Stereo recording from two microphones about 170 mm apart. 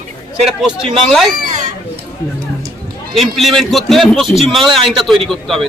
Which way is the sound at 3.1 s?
Centre (ahead or behind).